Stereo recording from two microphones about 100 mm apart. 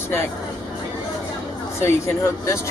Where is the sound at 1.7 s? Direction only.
25° left (ahead or behind).